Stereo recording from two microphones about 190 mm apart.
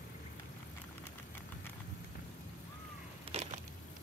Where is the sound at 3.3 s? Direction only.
30° right (ahead or behind).